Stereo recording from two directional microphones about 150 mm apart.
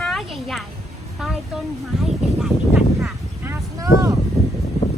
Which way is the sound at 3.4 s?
20° right (ahead or behind).